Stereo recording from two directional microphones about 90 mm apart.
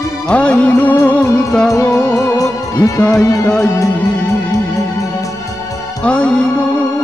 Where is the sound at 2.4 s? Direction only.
40° left (ahead or behind).